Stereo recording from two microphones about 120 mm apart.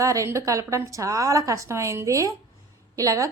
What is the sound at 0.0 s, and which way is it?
A woman's voice, 25° right (ahead or behind).